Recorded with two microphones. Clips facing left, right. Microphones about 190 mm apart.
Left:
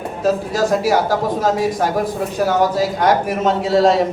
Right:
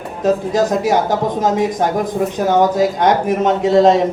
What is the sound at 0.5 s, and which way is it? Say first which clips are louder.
A man's voice: right 1 dB; 20° right (ahead or behind).